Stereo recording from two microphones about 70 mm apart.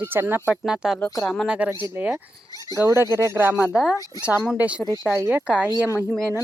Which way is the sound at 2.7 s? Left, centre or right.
Right.